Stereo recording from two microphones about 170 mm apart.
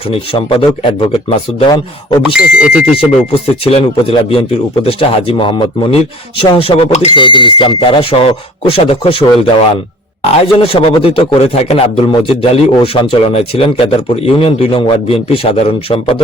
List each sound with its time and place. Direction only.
0.1 s a man's voice: 30° left (ahead or behind)
1.7 s speech: 25° left (ahead or behind)
2.2 s speech: 5° right (ahead or behind)
2.9 s a man's voice: 35° left (ahead or behind)
7.2 s a man's voice: 30° left (ahead or behind)
10.4 s a man's voice: 35° left (ahead or behind)